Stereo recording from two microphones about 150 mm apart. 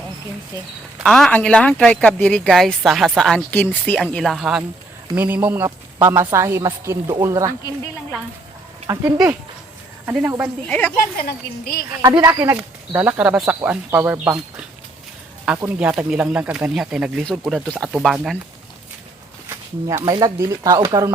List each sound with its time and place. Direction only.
0.9 s speech: centre (ahead or behind)
3.5 s speech: 15° left (ahead or behind)
4.0 s a woman's voice: centre (ahead or behind); by 7.5 s 20° right (ahead or behind)
8.9 s speech: 25° right (ahead or behind)
10.2 s a woman's voice: 15° right (ahead or behind)
10.7 s speech: 10° left (ahead or behind)
11.2 s a woman's voice: 90° left
12.2 s speech: 20° right (ahead or behind)
13.1 s a woman's voice: 10° right (ahead or behind)
19.5 s speech: 20° right (ahead or behind)